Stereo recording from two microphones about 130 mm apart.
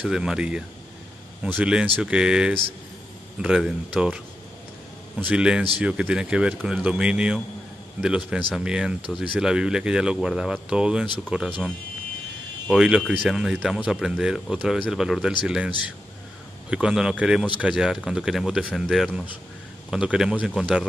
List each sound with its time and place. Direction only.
0.0 s speech: 5° right (ahead or behind)
5.2 s speech: 10° right (ahead or behind)
12.6 s speech: 5° right (ahead or behind)
16.7 s speech: 5° right (ahead or behind)